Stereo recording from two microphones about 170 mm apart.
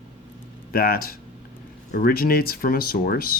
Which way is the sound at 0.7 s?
60° left (ahead or behind).